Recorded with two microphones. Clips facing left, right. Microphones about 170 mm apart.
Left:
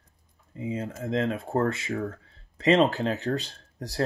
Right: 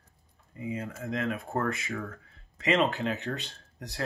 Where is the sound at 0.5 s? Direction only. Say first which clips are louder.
Left 3 dB; 25° left (ahead or behind).